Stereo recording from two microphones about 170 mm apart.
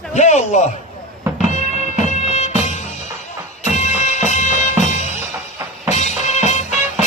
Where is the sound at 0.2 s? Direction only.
45° left (ahead or behind).